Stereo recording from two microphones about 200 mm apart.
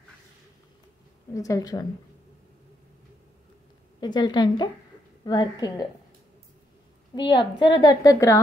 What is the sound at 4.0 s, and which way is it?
A woman's voice, 20° left (ahead or behind).